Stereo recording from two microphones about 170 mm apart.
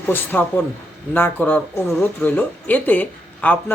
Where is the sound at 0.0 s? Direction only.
10° left (ahead or behind).